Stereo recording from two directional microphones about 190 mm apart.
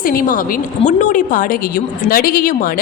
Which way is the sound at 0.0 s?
50° left (ahead or behind).